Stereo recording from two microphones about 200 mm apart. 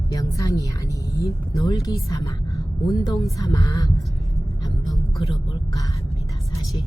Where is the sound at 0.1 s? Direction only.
15° left (ahead or behind).